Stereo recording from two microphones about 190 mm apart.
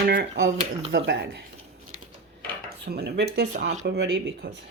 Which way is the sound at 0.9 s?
90° right.